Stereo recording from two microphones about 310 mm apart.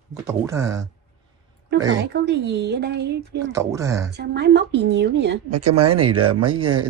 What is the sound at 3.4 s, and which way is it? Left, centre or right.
Speech, centre.